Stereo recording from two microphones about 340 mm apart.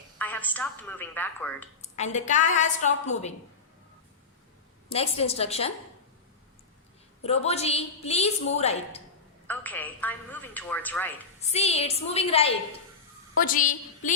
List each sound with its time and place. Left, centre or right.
0.2 s a woman's voice: centre
1.8 s a woman's voice: centre
4.9 s a woman's voice: centre
7.2 s a woman's voice: centre
9.5 s a woman's voice: centre
11.3 s a woman's voice: centre